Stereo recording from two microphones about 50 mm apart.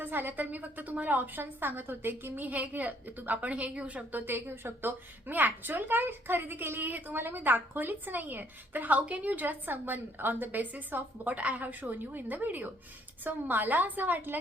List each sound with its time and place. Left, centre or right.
0.0 s a woman's voice: right
4.3 s a woman's voice: right